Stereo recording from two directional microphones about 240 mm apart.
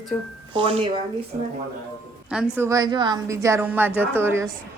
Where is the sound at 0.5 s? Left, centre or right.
Right.